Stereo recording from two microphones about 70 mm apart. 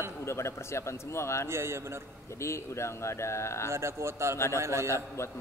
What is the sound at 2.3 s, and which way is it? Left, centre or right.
Speech, left.